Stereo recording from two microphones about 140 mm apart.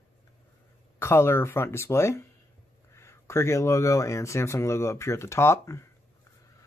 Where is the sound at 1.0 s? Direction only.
20° left (ahead or behind).